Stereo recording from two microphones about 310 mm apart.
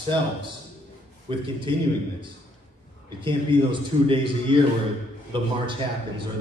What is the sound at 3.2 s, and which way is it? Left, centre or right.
A man's voice, centre.